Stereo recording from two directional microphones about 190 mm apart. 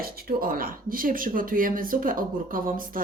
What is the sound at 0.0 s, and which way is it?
Speech, 50° right (ahead or behind).